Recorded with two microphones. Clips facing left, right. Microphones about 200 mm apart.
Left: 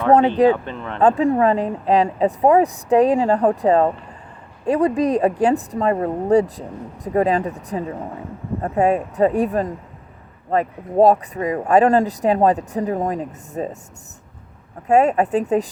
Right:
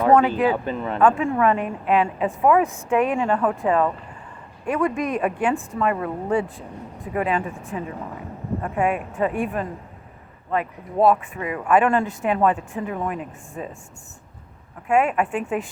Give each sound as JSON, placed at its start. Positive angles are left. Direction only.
{"t": 0.1, "sound": "a woman's voice", "side_deg": 35}
{"t": 0.5, "sound": "speech", "side_deg": -5}
{"t": 0.9, "sound": "a woman's voice", "side_deg": 35}
{"t": 14.8, "sound": "a woman's voice", "side_deg": 40}